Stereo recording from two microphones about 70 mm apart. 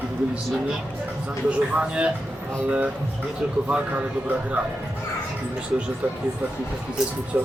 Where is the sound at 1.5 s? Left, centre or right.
Centre.